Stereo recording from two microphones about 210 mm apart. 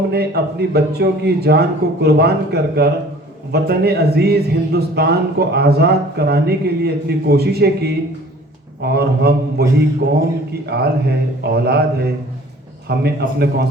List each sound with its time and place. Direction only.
0.1 s a man's voice: 50° right (ahead or behind)
10.7 s a man's voice: 50° right (ahead or behind)